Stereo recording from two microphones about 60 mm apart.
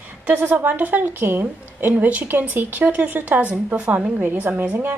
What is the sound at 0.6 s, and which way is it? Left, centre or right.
A woman's voice, right.